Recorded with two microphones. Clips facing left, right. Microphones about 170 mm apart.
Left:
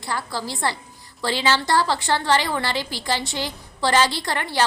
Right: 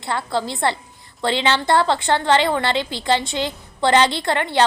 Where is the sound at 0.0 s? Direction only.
25° right (ahead or behind).